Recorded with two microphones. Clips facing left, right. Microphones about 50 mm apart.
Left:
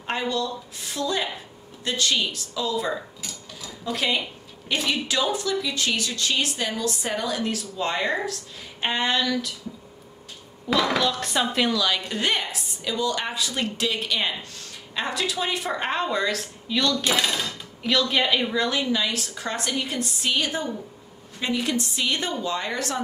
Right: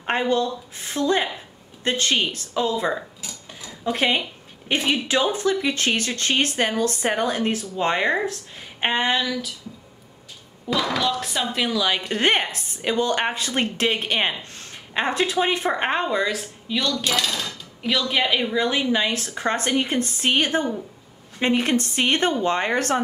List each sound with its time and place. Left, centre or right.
0.0 s speech: right; by 9.3 s centre
11.0 s speech: centre
11.7 s speech: centre
12.1 s speech: right
16.2 s speech: centre
17.0 s speech: left
17.8 s speech: centre
18.7 s speech: right